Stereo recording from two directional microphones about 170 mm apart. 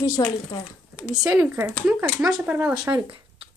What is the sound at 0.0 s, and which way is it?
Speech, 25° left (ahead or behind).